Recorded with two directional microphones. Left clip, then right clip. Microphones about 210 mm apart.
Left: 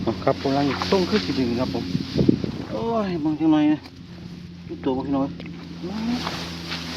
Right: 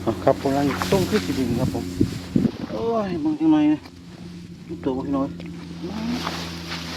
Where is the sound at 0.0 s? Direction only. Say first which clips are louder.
Right 2 dB; 15° right (ahead or behind).